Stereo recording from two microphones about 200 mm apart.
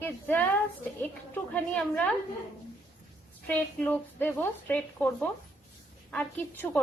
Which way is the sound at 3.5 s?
5° left (ahead or behind).